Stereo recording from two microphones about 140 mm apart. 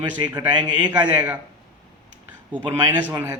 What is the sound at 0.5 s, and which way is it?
Speech, 30° right (ahead or behind).